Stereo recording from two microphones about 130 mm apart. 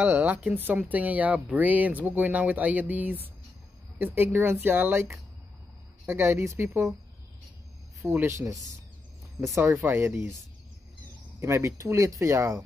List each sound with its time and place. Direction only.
0.0 s speech: 15° right (ahead or behind)
8.0 s speech: 15° right (ahead or behind)
11.3 s speech: 20° right (ahead or behind)